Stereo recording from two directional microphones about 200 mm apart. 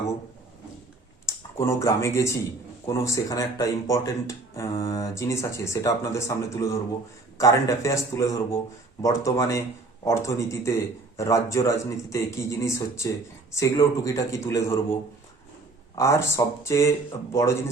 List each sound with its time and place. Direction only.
1.3 s speech: 15° left (ahead or behind)
16.0 s speech: 15° left (ahead or behind)